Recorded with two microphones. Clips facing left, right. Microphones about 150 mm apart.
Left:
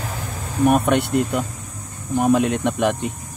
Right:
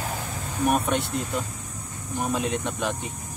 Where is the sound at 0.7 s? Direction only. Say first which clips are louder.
Left 7 dB; 65° left (ahead or behind).